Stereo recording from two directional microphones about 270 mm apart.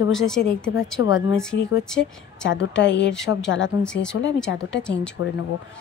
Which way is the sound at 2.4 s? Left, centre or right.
Left.